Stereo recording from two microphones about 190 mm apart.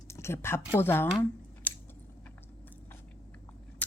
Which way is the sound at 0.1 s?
15° left (ahead or behind).